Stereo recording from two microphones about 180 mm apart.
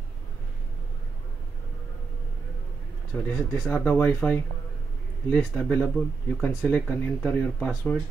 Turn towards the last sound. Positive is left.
turn(degrees=5)  # may be behind; listen again after turning